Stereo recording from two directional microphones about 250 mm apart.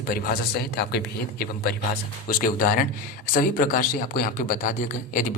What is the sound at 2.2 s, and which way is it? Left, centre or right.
Speech, left.